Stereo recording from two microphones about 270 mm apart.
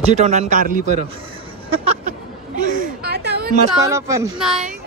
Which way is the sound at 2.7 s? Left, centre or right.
Right.